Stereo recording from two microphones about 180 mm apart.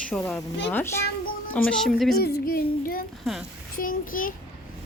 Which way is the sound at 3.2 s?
Centre (ahead or behind).